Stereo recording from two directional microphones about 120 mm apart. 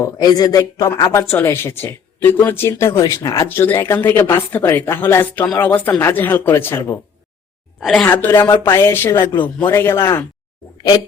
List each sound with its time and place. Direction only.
0.0 s speech: 30° left (ahead or behind)
7.8 s a woman's voice: centre (ahead or behind)
8.0 s a woman's voice: 20° left (ahead or behind)